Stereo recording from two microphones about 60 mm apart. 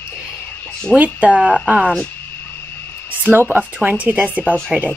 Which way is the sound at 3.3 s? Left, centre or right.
Right.